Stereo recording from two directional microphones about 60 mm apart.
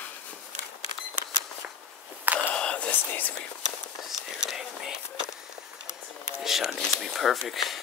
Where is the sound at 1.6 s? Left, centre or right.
Right.